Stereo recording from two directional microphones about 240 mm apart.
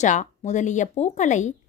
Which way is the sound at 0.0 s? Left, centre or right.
Left.